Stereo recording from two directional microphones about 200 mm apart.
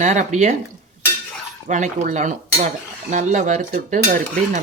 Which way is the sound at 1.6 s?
35° right (ahead or behind).